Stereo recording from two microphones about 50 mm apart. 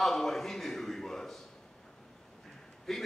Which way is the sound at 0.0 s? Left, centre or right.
Centre.